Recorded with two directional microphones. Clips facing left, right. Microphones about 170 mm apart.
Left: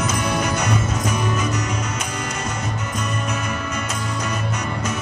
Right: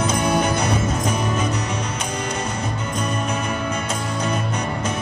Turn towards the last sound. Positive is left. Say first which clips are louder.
# right 1 dB
turn(degrees=-30)  # may be behind; listen again after turning